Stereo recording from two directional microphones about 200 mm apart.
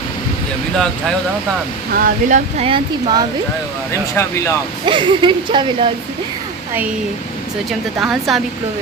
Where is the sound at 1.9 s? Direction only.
45° right (ahead or behind).